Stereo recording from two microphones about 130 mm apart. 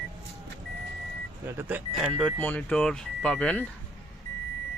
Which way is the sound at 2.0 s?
Centre (ahead or behind).